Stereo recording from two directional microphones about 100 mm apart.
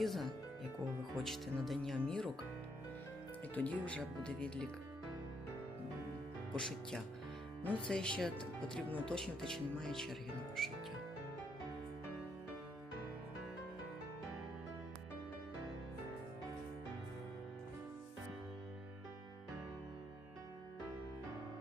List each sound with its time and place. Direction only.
0.0 s speech: centre (ahead or behind)
3.5 s speech: 15° left (ahead or behind)
6.6 s speech: 5° left (ahead or behind)